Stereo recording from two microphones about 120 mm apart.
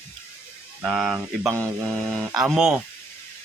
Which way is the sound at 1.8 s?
5° left (ahead or behind).